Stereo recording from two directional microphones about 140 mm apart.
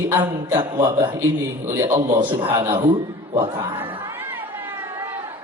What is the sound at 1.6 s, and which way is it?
Speech, 20° right (ahead or behind).